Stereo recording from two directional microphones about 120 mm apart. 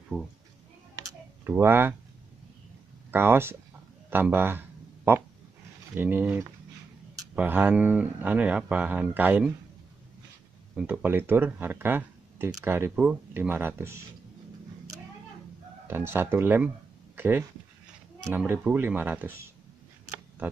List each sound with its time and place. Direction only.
0.1 s speech: 15° left (ahead or behind)
1.4 s speech: 20° right (ahead or behind)
3.1 s speech: 20° right (ahead or behind)
4.1 s a sound: 20° right (ahead or behind)
5.9 s speech: 15° right (ahead or behind)
10.8 s speech: 15° right (ahead or behind)
15.9 s speech: 20° right (ahead or behind)